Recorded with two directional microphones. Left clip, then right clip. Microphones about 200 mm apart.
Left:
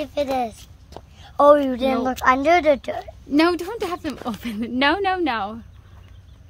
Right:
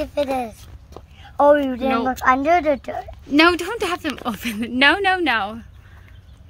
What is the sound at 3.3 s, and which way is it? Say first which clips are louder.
A woman's voice: right 4 dB; 5° left (ahead or behind).